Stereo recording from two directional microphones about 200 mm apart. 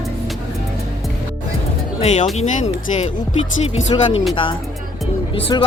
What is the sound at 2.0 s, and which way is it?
Speech, 35° left (ahead or behind).